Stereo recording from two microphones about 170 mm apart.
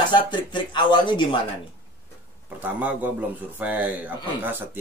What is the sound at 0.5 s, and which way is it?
Speech, 25° left (ahead or behind).